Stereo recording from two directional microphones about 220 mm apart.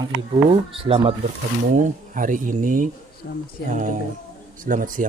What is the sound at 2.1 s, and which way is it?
Speech, 35° right (ahead or behind).